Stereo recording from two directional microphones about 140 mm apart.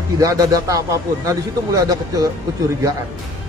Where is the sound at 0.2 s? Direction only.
25° right (ahead or behind).